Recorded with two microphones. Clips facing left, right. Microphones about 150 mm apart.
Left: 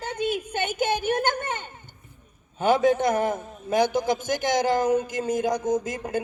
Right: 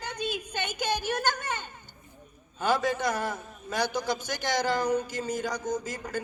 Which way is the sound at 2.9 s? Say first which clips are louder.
Left 7 dB; 50° left (ahead or behind).